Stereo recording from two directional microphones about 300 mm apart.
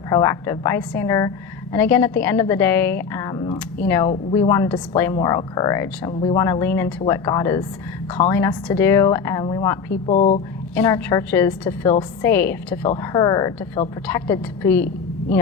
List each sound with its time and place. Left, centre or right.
0.1 s a woman's voice: centre
10.8 s a woman's voice: centre